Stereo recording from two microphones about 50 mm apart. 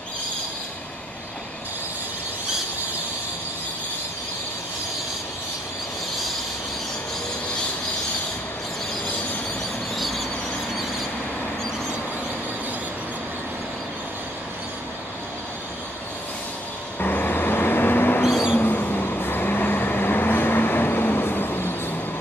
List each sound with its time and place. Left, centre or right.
9.9 s vehicle: centre
17.0 s vehicle: left